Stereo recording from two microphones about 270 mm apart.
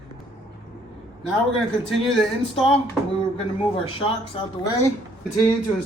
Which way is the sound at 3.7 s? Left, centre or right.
Centre.